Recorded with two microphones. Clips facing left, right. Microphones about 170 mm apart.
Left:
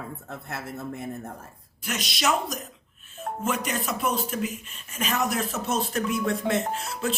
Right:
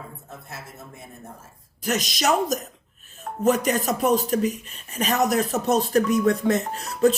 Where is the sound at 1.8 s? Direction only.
40° right (ahead or behind).